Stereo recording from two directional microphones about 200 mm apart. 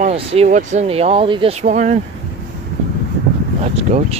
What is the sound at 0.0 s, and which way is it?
Speech, 30° right (ahead or behind).